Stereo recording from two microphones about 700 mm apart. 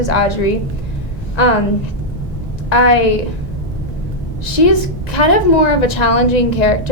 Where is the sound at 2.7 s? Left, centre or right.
Left.